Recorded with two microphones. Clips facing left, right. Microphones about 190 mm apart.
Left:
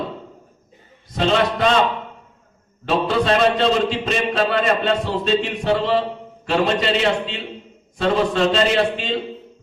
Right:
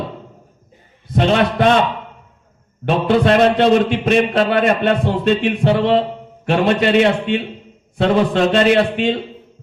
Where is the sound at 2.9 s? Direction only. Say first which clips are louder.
Right 4 dB; 60° right (ahead or behind).